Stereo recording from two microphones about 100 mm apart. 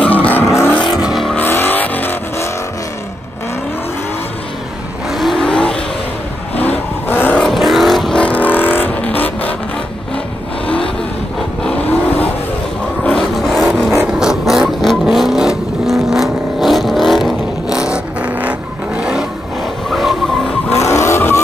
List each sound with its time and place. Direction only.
0.0 s vehicle: 15° left (ahead or behind)
1.0 s vehicle: centre (ahead or behind)
1.4 s vehicle: 20° left (ahead or behind)
5.1 s vehicle: centre (ahead or behind)
7.1 s vehicle: 20° left (ahead or behind)
7.3 s vehicle: centre (ahead or behind)
13.0 s vehicle: 5° left (ahead or behind)
17.7 s vehicle: 10° right (ahead or behind)
20.8 s vehicle: 30° left (ahead or behind)